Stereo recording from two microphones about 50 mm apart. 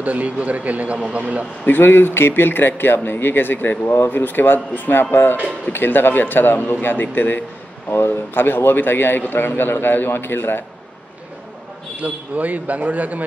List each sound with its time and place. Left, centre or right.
0.0 s speech: right
1.7 s a man's voice: left
7.9 s a man's voice: left
12.0 s speech: right